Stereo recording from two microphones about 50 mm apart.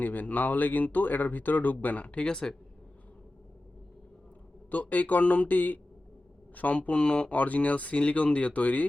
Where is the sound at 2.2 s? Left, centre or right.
Centre.